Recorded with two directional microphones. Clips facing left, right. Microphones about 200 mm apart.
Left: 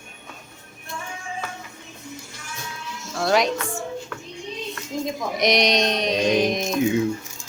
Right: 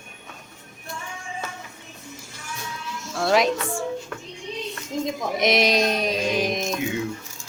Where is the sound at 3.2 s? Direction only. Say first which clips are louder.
Even; centre (ahead or behind).